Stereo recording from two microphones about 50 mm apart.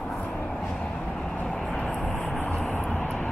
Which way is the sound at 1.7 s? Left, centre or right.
Left.